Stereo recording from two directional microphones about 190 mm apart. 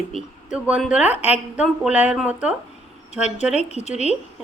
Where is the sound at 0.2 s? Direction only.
5° right (ahead or behind).